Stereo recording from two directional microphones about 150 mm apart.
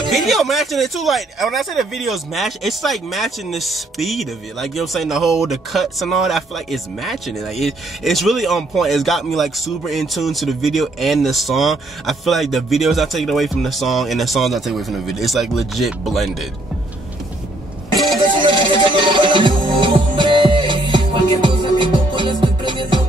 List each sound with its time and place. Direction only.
0.1 s speech: centre (ahead or behind)
17.9 s music: centre (ahead or behind)
18.9 s music: 35° right (ahead or behind)